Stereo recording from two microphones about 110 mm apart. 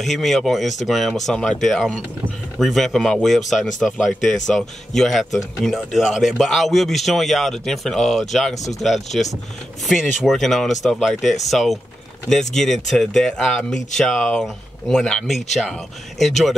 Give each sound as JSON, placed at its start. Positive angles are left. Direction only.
{"t": 0.0, "sound": "a man's voice", "side_deg": 0}